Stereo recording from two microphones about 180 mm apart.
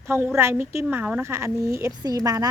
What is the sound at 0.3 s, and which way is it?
Speech, 15° right (ahead or behind).